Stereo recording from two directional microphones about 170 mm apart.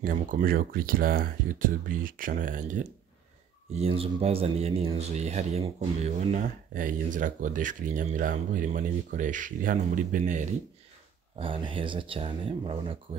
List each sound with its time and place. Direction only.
0.0 s speech: 55° right (ahead or behind)
3.7 s speech: 35° right (ahead or behind)
11.3 s speech: 30° right (ahead or behind)